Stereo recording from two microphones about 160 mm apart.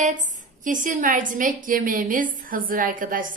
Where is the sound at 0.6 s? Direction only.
55° right (ahead or behind).